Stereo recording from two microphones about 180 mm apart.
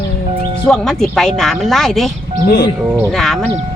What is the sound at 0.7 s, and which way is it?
Speech, centre (ahead or behind).